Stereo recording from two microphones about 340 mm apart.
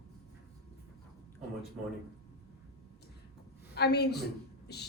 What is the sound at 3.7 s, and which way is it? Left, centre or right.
A woman's voice, left.